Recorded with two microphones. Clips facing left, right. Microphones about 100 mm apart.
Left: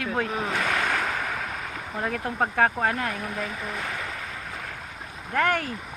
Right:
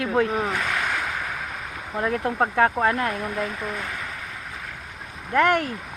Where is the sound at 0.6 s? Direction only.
40° left (ahead or behind).